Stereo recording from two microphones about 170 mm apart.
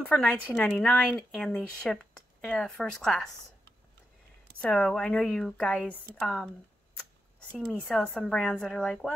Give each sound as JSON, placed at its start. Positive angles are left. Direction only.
{"t": 0.0, "sound": "a woman's voice", "side_deg": 10}
{"t": 4.6, "sound": "a woman's voice", "side_deg": 5}
{"t": 7.9, "sound": "speech", "side_deg": 5}